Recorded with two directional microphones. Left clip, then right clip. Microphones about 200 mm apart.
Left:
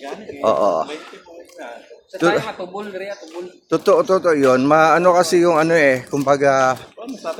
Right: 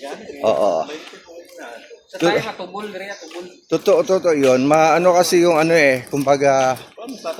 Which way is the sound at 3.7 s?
5° right (ahead or behind).